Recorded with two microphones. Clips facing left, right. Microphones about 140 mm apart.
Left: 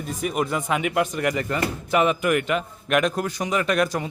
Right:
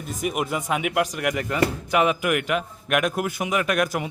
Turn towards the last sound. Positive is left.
turn(degrees=0)  # may be behind; listen again after turning